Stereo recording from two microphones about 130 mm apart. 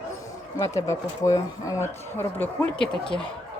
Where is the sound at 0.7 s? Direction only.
25° left (ahead or behind).